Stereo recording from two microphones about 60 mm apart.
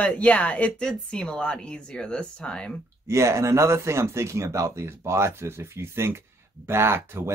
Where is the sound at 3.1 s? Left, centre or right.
Right.